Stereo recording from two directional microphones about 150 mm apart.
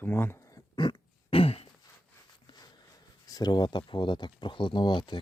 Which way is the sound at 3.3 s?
25° left (ahead or behind).